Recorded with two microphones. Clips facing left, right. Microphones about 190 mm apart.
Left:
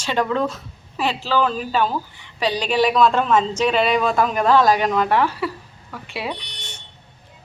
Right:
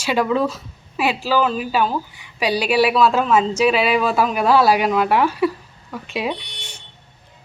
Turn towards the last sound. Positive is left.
turn(degrees=-15)  # may be behind; listen again after turning